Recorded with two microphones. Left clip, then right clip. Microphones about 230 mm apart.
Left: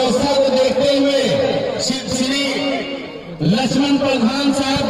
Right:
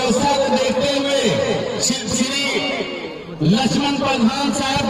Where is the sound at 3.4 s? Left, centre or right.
Left.